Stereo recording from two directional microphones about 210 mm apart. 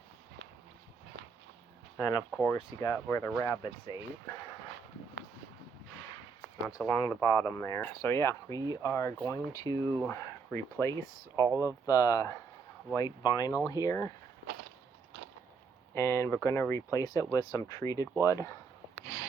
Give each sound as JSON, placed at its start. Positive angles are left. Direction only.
{"t": 2.0, "sound": "speech", "side_deg": 15}
{"t": 6.8, "sound": "speech", "side_deg": 10}
{"t": 11.3, "sound": "speech", "side_deg": -15}
{"t": 11.9, "sound": "speech", "side_deg": 15}
{"t": 16.0, "sound": "speech", "side_deg": 10}